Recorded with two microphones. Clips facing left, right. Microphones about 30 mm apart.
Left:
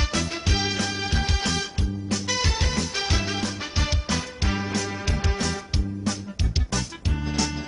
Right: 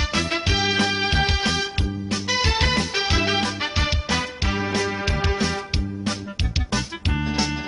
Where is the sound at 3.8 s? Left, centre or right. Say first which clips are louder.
Even; right.